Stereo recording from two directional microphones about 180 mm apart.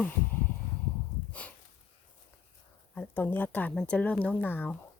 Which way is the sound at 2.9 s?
10° left (ahead or behind).